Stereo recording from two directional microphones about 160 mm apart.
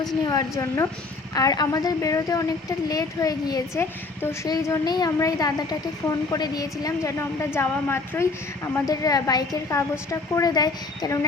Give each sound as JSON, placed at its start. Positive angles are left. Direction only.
{"t": 0.3, "sound": "a woman's voice", "side_deg": 20}